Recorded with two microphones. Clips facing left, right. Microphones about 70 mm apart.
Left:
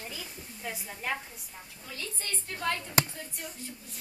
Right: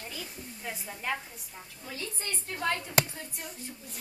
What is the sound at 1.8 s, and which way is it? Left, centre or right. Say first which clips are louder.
Speech: right 2 dB; right.